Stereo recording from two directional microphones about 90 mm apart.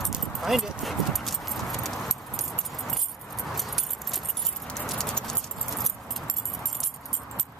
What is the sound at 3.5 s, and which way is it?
Keys jangling, centre (ahead or behind).